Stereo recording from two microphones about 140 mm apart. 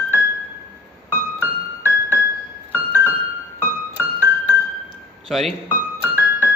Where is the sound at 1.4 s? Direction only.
15° right (ahead or behind).